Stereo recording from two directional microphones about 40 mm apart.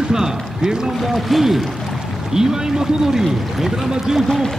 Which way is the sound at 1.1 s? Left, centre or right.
Centre.